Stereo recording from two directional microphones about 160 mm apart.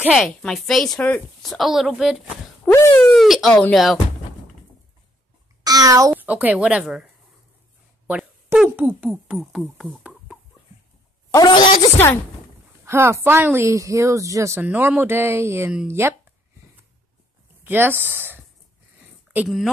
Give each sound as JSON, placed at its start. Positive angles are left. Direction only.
{"t": 0.0, "sound": "a woman's voice", "side_deg": 0}
{"t": 5.6, "sound": "a child's voice", "side_deg": -25}
{"t": 6.2, "sound": "a woman's voice", "side_deg": -10}
{"t": 8.1, "sound": "speech", "side_deg": -5}
{"t": 9.8, "sound": "chicken", "side_deg": -5}
{"t": 11.3, "sound": "speech", "side_deg": 25}
{"t": 12.8, "sound": "a woman's voice", "side_deg": -15}
{"t": 15.7, "sound": "a woman's voice", "side_deg": -5}
{"t": 17.6, "sound": "a woman's voice", "side_deg": -15}